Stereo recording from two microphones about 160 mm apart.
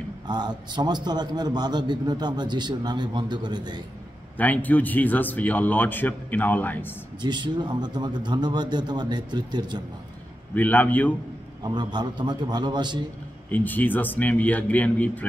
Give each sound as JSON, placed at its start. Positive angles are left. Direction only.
{"t": 0.3, "sound": "a man's voice", "side_deg": -25}
{"t": 4.4, "sound": "speech", "side_deg": 10}
{"t": 7.2, "sound": "a man's voice", "side_deg": -30}
{"t": 10.5, "sound": "speech", "side_deg": 10}
{"t": 11.6, "sound": "a man's voice", "side_deg": -25}
{"t": 13.5, "sound": "speech", "side_deg": 10}